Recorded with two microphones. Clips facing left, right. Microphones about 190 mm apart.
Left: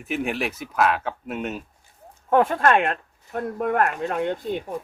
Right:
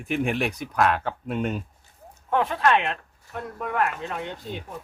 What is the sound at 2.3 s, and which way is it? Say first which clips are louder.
Speech: left 3 dB; 50° left (ahead or behind).